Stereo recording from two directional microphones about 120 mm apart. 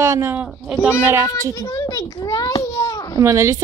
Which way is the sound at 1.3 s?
30° left (ahead or behind).